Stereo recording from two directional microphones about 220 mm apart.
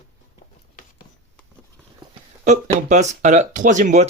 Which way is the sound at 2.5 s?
35° right (ahead or behind).